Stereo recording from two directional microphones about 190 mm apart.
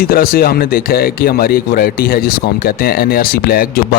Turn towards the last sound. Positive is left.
turn(degrees=55)  # may be behind; listen again after turning